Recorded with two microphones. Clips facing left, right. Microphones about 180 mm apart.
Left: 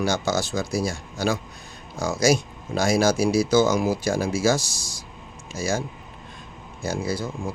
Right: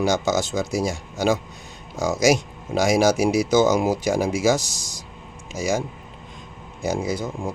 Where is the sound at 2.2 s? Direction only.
20° right (ahead or behind).